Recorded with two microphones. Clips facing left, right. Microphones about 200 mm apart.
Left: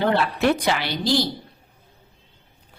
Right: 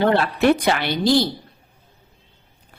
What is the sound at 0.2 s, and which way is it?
A woman's voice, 55° right (ahead or behind).